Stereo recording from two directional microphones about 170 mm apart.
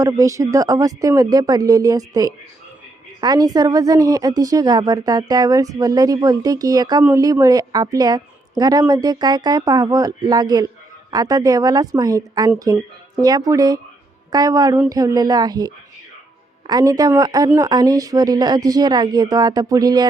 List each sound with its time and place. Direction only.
0.0 s a woman's voice: 20° right (ahead or behind)